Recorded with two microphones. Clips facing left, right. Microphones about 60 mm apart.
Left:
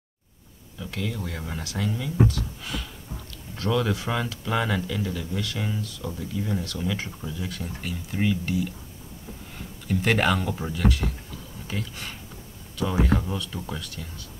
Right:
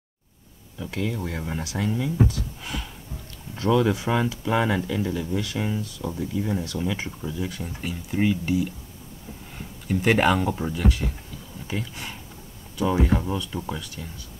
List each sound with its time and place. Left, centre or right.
0.9 s speech: right
2.6 s gasp: right
3.5 s speech: centre
9.8 s speech: centre